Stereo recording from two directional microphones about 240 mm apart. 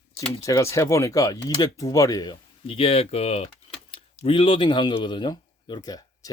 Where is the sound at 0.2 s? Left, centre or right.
Centre.